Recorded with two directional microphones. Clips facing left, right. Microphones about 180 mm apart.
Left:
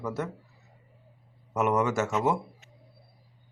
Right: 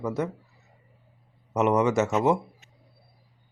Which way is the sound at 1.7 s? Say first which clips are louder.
Right 4 dB; 20° right (ahead or behind).